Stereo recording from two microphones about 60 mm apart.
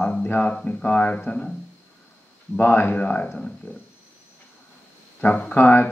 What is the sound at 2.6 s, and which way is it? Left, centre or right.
Speech, left.